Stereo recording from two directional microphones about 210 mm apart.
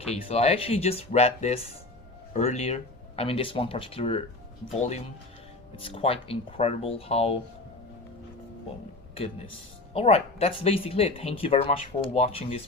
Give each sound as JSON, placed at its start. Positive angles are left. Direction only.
{"t": 0.0, "sound": "speech", "side_deg": 30}
{"t": 9.9, "sound": "speech", "side_deg": 30}